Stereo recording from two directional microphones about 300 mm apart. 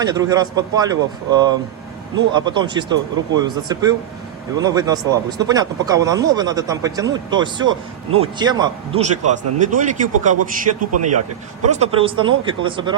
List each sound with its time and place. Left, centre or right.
0.0 s speech: centre
10.3 s a man's voice: right
11.7 s speech: centre